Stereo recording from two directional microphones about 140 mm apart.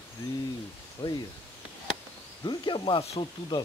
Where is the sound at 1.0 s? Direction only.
35° left (ahead or behind).